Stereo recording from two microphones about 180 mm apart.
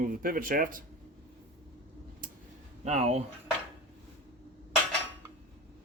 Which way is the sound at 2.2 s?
50° right (ahead or behind).